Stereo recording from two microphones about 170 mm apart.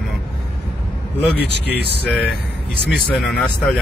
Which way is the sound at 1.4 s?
75° left (ahead or behind).